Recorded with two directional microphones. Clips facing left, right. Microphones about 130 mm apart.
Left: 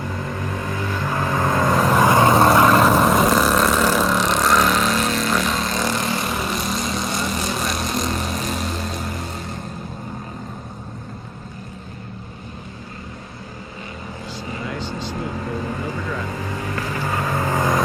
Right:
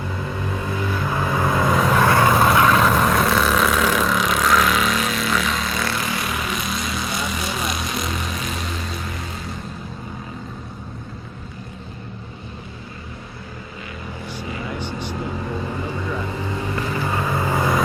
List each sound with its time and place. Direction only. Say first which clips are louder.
0.2 s vehicle: even; 10° right (ahead or behind)
1.9 s vehicle: left 3 dB; 15° left (ahead or behind)
2.4 s vehicle: left 2 dB; centre (ahead or behind)
8.2 s vehicle: left 3 dB; 40° left (ahead or behind)
8.4 s vehicle: left 3 dB; centre (ahead or behind)
14.8 s vehicle: even; 15° right (ahead or behind)